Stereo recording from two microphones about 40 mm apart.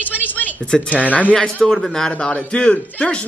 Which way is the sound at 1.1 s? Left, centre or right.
Left.